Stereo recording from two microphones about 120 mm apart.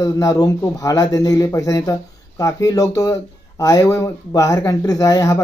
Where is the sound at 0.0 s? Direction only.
25° left (ahead or behind).